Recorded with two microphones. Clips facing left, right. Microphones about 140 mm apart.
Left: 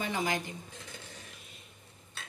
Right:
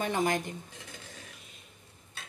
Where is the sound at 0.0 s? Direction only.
45° right (ahead or behind).